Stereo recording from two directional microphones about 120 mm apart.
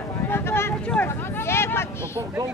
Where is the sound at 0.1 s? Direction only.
20° left (ahead or behind).